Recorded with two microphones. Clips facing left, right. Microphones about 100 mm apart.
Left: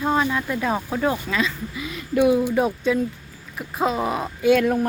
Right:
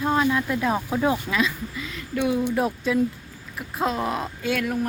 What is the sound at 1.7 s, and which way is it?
Speech, 10° left (ahead or behind).